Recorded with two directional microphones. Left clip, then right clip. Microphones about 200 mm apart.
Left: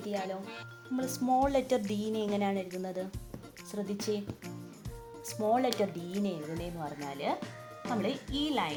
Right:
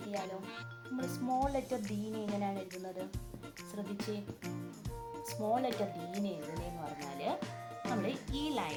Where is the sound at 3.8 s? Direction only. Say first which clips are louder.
Left 7 dB; 40° left (ahead or behind).